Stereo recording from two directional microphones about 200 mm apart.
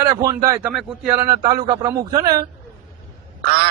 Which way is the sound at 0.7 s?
5° right (ahead or behind).